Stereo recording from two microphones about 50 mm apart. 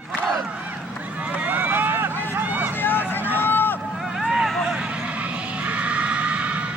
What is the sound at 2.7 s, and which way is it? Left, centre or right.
Vehicle, left.